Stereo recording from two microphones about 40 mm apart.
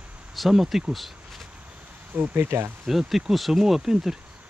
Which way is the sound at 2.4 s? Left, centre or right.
Right.